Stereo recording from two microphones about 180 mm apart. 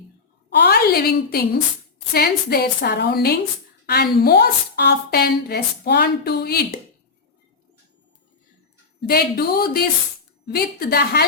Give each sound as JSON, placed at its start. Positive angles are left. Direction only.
{"t": 0.5, "sound": "a sound", "side_deg": 60}
{"t": 2.1, "sound": "a woman's voice", "side_deg": 60}
{"t": 9.0, "sound": "a woman's voice", "side_deg": 55}